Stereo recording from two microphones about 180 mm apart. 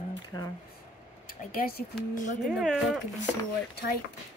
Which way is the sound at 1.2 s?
55° left (ahead or behind).